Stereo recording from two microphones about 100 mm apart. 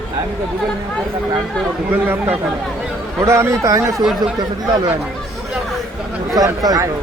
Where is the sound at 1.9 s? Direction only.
20° right (ahead or behind).